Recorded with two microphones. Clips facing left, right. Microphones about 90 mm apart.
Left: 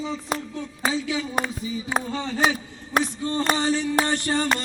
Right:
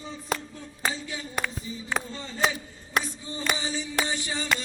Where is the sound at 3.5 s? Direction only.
65° left (ahead or behind).